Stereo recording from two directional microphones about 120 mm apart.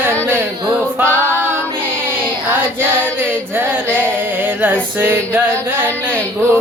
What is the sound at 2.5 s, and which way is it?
Music, 20° right (ahead or behind).